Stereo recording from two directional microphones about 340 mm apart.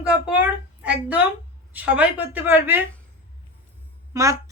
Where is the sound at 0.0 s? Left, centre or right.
Centre.